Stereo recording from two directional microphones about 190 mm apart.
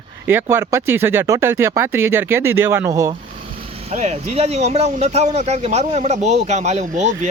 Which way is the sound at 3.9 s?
35° right (ahead or behind).